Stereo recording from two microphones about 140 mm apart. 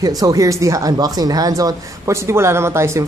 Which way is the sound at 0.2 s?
25° right (ahead or behind).